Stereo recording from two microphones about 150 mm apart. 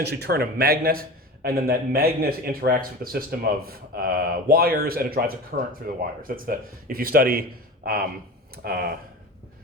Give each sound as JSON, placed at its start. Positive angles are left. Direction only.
{"t": 0.0, "sound": "a man's voice", "side_deg": -90}
{"t": 8.6, "sound": "speech", "side_deg": -90}